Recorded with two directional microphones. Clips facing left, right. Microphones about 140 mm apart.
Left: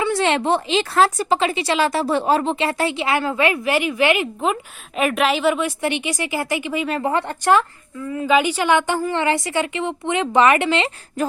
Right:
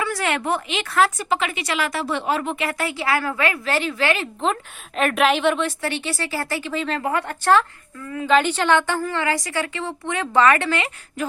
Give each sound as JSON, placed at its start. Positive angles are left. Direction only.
{"t": 0.0, "sound": "speech", "side_deg": 25}
{"t": 4.9, "sound": "a woman's voice", "side_deg": 5}
{"t": 7.0, "sound": "speech", "side_deg": 25}